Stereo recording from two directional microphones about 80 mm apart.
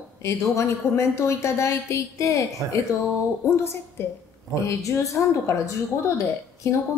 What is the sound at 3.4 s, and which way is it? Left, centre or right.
A woman's voice, left.